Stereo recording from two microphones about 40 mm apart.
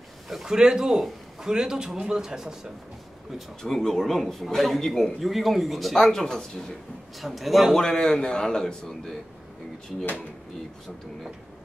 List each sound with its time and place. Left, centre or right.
0.5 s speech: centre
3.6 s speech: centre
7.2 s speech: centre
7.7 s a man's voice: centre